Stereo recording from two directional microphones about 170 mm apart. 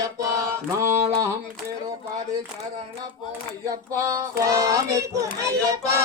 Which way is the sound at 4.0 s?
20° right (ahead or behind).